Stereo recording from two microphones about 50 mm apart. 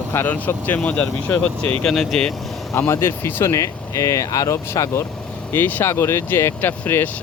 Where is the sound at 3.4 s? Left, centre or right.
Left.